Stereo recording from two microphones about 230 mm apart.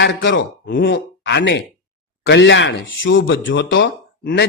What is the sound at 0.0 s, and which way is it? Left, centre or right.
Speech, left.